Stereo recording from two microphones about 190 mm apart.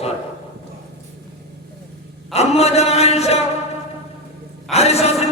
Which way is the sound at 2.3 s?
35° left (ahead or behind).